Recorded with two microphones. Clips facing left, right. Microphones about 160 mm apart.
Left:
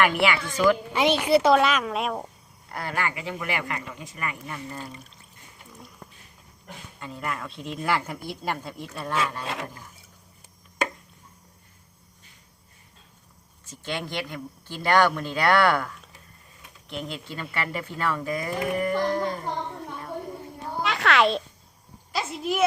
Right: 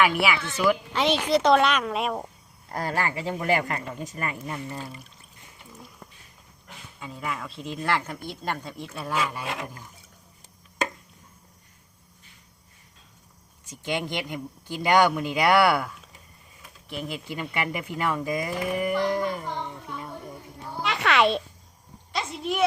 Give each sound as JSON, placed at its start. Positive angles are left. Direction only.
{"t": 0.0, "sound": "speech", "side_deg": -5}
{"t": 1.2, "sound": "speech", "side_deg": 5}
{"t": 2.7, "sound": "speech", "side_deg": -35}
{"t": 7.0, "sound": "speech", "side_deg": 0}
{"t": 13.7, "sound": "speech", "side_deg": -15}
{"t": 20.8, "sound": "a child's voice", "side_deg": 0}